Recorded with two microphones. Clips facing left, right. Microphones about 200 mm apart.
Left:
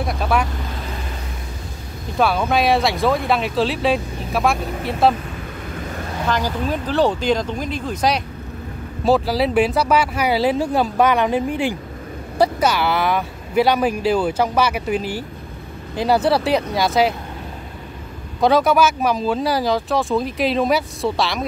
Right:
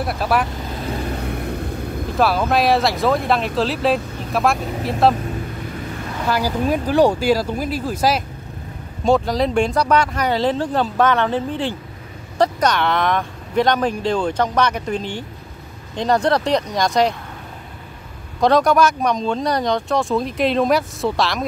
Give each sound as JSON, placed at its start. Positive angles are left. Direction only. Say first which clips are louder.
{"t": 0.0, "sound": "speech", "louder": "right 1 dB", "side_deg": -5}
{"t": 1.1, "sound": "vehicle", "louder": "right 8 dB", "side_deg": -60}
{"t": 2.1, "sound": "speech", "louder": "even", "side_deg": 0}
{"t": 6.2, "sound": "speech", "louder": "right 2 dB", "side_deg": -10}
{"t": 18.4, "sound": "speech", "louder": "even", "side_deg": 5}